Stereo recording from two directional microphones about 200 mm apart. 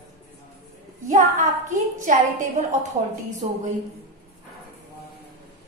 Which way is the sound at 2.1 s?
40° right (ahead or behind).